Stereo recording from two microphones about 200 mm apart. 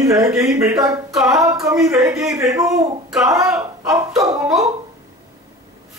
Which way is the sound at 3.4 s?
5° right (ahead or behind).